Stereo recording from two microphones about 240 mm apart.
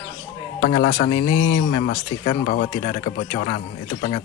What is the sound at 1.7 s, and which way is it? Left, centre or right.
Speech, left.